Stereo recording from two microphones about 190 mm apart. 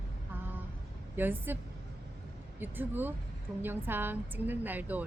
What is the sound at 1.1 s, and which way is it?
Speech, 10° right (ahead or behind).